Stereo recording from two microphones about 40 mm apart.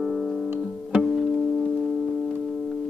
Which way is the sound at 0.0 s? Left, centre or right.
Centre.